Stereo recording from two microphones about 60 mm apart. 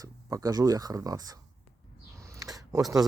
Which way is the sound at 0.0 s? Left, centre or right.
Right.